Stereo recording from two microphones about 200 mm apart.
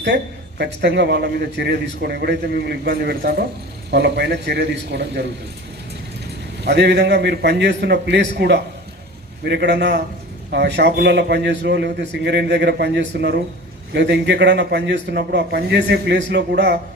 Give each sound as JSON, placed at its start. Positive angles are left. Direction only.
{"t": 0.6, "sound": "a man's voice", "side_deg": -60}
{"t": 6.7, "sound": "a man's voice", "side_deg": -55}